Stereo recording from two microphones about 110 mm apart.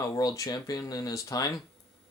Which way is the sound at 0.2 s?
35° left (ahead or behind).